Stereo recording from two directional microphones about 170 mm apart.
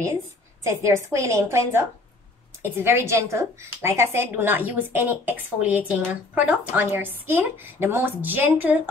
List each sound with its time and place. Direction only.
0.7 s a woman's voice: 15° right (ahead or behind)